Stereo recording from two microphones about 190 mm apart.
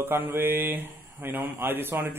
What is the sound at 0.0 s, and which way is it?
A man's voice, 10° right (ahead or behind).